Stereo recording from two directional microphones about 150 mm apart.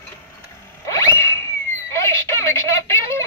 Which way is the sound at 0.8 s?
20° left (ahead or behind).